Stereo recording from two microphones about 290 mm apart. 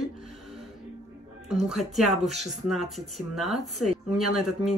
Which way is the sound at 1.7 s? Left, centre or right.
Centre.